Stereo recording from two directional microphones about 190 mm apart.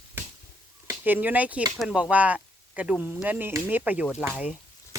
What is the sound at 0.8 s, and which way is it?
Speech, 10° right (ahead or behind).